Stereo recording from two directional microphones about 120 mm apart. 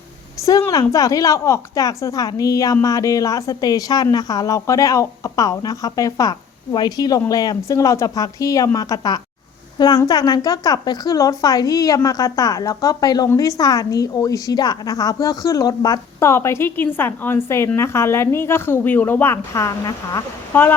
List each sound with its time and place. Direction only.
0.7 s a woman's voice: 30° left (ahead or behind)